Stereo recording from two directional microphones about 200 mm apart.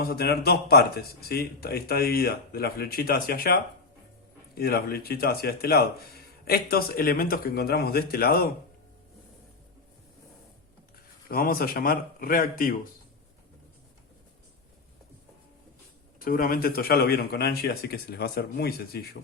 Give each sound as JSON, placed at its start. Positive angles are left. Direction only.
{"t": 0.0, "sound": "speech", "side_deg": 50}
{"t": 11.3, "sound": "speech", "side_deg": 45}
{"t": 16.2, "sound": "speech", "side_deg": 45}